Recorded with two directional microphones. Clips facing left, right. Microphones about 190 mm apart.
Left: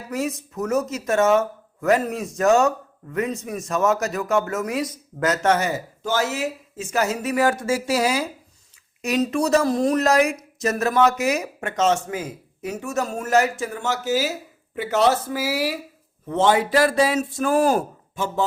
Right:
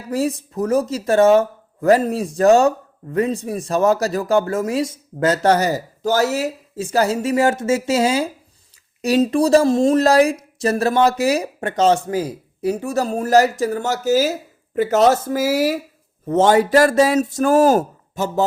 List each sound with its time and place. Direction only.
0.1 s speech: 30° right (ahead or behind)